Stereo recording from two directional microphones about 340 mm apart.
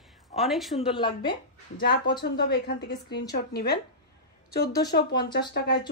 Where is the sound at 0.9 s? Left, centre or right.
Centre.